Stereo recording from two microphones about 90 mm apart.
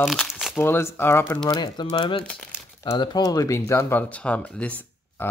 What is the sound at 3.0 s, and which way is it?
Speech, 50° left (ahead or behind).